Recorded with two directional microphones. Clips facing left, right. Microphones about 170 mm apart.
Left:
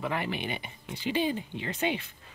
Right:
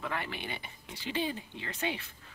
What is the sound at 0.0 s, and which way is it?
Speech, 15° left (ahead or behind).